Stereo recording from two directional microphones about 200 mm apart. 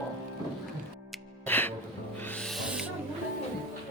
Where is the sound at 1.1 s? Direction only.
10° left (ahead or behind).